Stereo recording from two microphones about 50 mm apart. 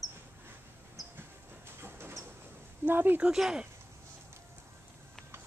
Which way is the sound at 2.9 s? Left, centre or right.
Right.